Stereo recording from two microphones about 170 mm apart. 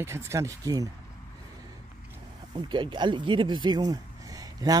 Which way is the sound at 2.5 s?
25° right (ahead or behind).